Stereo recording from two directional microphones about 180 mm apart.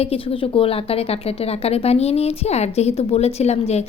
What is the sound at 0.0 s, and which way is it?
A woman's voice, 35° left (ahead or behind).